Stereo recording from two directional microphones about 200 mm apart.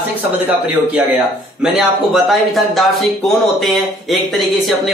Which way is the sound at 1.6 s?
Centre (ahead or behind).